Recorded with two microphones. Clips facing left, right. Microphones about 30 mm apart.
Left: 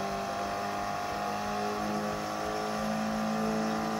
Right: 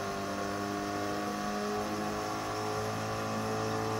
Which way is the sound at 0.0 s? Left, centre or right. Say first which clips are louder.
Left 2 dB; centre.